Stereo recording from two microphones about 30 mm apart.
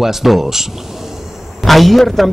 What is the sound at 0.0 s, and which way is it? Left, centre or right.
Speech, centre.